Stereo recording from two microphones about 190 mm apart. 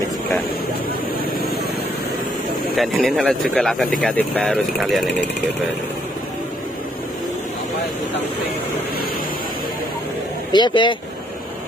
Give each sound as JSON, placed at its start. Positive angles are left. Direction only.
{"t": 2.7, "sound": "speech", "side_deg": 0}
{"t": 10.5, "sound": "speech", "side_deg": 25}